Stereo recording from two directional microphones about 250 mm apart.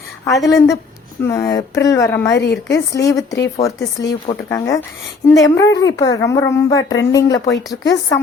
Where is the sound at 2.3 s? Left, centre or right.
Left.